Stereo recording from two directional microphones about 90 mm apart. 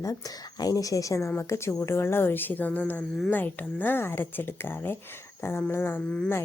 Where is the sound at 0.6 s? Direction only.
40° left (ahead or behind).